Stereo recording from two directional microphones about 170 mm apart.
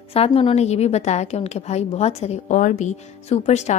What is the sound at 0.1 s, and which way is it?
A woman's voice, 35° left (ahead or behind).